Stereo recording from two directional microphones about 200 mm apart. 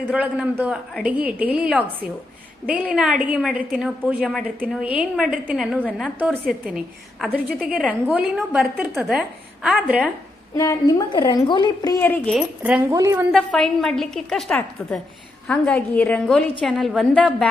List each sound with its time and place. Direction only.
0.0 s a woman's voice: 5° right (ahead or behind)
10.5 s a woman's voice: 15° left (ahead or behind)
12.4 s a woman's voice: 5° right (ahead or behind)
13.3 s a woman's voice: 5° left (ahead or behind)